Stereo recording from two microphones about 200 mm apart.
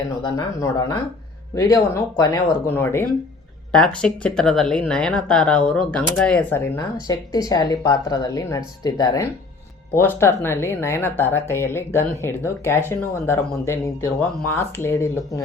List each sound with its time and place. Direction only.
0.2 s speech: 20° left (ahead or behind)